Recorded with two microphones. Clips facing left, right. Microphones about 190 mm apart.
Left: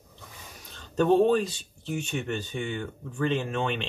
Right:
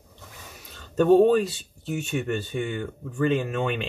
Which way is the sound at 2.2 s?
45° right (ahead or behind).